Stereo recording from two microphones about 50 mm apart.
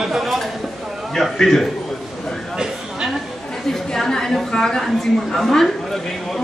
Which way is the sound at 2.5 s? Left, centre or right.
Centre.